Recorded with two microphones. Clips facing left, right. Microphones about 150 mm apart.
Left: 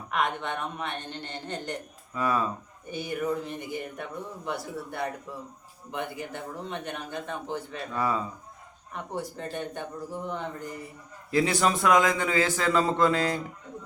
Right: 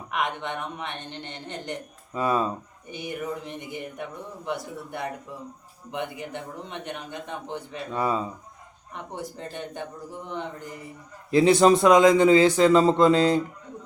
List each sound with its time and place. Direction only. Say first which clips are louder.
0.1 s speech: even; 20° right (ahead or behind)
11.3 s speech: right 8 dB; 25° right (ahead or behind)